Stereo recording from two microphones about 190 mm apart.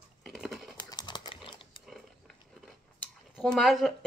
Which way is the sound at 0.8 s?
25° left (ahead or behind).